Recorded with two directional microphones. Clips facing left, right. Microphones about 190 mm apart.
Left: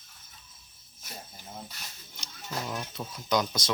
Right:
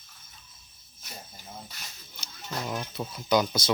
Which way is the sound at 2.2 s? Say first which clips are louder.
Right 1 dB; 5° right (ahead or behind).